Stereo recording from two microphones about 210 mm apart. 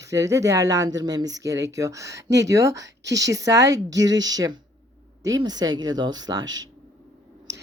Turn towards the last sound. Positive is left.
turn(degrees=-20)  # may be behind; listen again after turning